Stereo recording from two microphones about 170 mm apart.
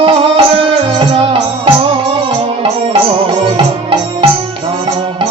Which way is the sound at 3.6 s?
30° right (ahead or behind).